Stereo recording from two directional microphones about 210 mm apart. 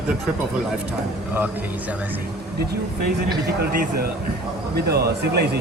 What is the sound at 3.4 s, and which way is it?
A man's voice, 50° right (ahead or behind).